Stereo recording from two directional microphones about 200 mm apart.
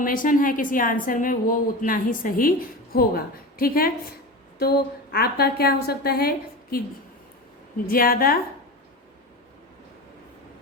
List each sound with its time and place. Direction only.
0.0 s a woman's voice: 45° left (ahead or behind)
5.1 s a woman's voice: 50° left (ahead or behind)
7.9 s a woman's voice: 45° left (ahead or behind)